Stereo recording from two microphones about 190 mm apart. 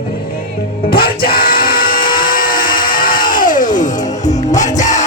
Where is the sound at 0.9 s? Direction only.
50° left (ahead or behind).